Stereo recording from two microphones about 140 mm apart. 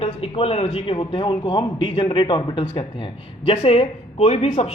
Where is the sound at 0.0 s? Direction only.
45° left (ahead or behind).